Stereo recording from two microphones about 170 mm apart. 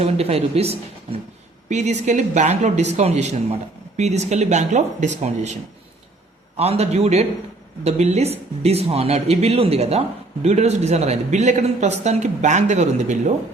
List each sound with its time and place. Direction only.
0.0 s speech: 35° right (ahead or behind)
6.6 s speech: 35° right (ahead or behind)